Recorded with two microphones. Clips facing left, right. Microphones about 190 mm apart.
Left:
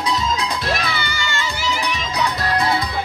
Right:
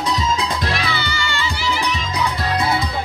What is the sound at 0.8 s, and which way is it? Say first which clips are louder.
Music: right 1 dB; 50° left (ahead or behind).